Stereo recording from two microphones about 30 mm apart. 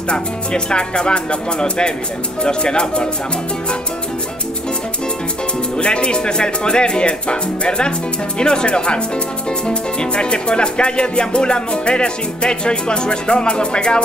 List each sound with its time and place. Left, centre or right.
0.1 s music: left
5.8 s music: left